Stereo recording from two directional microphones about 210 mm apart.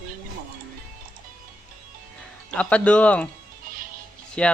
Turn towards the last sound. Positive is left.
turn(degrees=5)  # may be behind; listen again after turning